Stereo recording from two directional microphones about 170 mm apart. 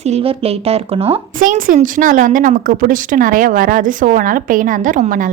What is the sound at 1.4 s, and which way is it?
A woman's voice, 55° right (ahead or behind).